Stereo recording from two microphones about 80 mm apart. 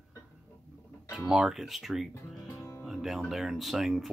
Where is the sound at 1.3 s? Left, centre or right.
Centre.